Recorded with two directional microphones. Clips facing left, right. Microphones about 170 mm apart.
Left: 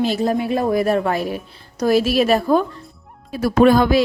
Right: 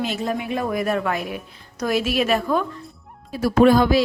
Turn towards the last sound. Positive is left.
turn(degrees=60)  # may be behind; listen again after turning